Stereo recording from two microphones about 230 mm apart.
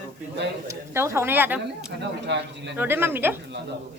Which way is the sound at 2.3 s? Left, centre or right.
Right.